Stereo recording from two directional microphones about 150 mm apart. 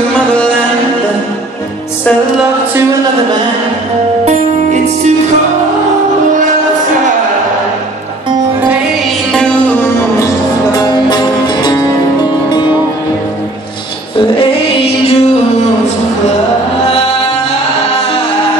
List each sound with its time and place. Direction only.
0.1 s music: 5° left (ahead or behind)
9.3 s music: 5° left (ahead or behind)
10.1 s music: 25° left (ahead or behind)
14.1 s music: 35° left (ahead or behind)